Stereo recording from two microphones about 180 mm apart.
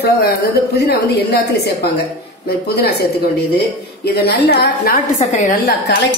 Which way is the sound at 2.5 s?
65° left (ahead or behind).